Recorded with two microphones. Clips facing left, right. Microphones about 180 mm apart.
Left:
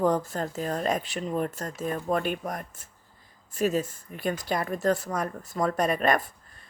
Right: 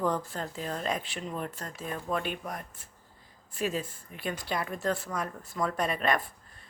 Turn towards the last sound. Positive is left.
turn(degrees=45)  # may be behind; listen again after turning